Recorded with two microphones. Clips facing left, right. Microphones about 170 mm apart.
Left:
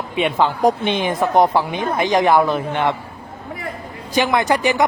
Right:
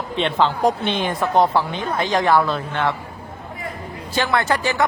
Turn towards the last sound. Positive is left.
turn(degrees=15)  # may be behind; listen again after turning